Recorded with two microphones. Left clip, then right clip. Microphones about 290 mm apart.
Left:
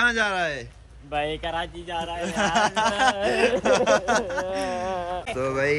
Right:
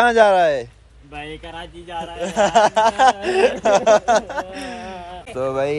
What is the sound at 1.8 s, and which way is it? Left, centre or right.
Speech, centre.